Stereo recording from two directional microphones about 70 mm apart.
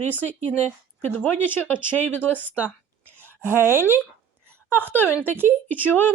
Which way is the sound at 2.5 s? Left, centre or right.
Right.